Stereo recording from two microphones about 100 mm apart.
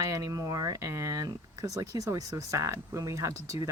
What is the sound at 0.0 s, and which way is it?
Speech, 35° right (ahead or behind).